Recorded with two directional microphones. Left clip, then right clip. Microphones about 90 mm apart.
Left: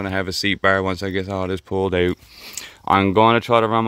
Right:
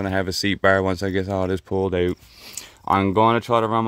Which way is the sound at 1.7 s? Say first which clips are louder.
Left 3 dB; 10° right (ahead or behind).